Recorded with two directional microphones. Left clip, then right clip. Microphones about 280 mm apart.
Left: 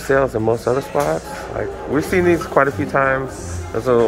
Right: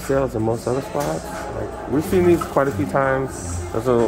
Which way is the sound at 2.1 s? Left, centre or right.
Centre.